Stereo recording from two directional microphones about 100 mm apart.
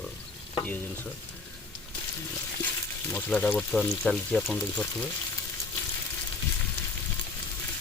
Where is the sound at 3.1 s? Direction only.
15° left (ahead or behind).